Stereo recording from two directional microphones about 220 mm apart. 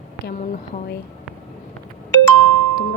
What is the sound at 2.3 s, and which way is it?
Music, 80° right.